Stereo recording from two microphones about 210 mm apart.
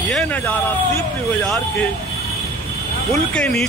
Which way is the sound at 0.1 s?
5° left (ahead or behind).